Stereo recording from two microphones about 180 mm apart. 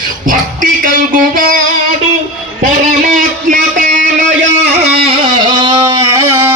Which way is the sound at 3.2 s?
50° right (ahead or behind).